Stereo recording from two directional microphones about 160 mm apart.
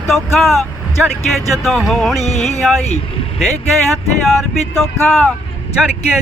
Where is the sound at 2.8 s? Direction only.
45° left (ahead or behind).